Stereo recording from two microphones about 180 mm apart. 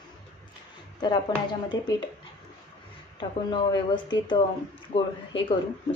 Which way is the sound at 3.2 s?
25° left (ahead or behind).